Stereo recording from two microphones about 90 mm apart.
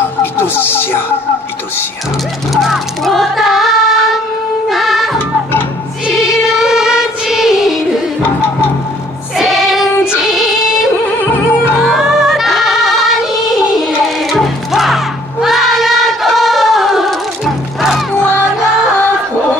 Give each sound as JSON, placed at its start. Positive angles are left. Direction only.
{"t": 0.2, "sound": "music", "side_deg": 25}
{"t": 2.5, "sound": "child singing", "side_deg": 0}
{"t": 4.6, "sound": "music", "side_deg": 0}
{"t": 9.4, "sound": "child singing", "side_deg": 0}
{"t": 11.1, "sound": "music", "side_deg": 20}
{"t": 11.8, "sound": "music", "side_deg": 0}
{"t": 15.4, "sound": "a sound", "side_deg": 0}
{"t": 18.1, "sound": "music", "side_deg": 25}